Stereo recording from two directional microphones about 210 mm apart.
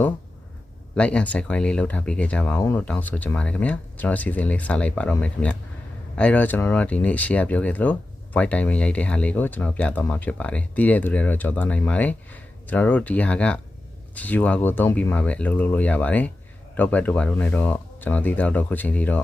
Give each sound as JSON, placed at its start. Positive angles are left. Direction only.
{"t": 0.9, "sound": "speech", "side_deg": 5}